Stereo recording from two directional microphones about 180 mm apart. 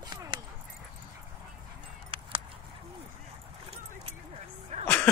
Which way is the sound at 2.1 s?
30° right (ahead or behind).